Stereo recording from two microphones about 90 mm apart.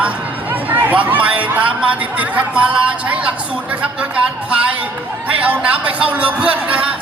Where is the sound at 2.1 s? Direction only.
15° right (ahead or behind).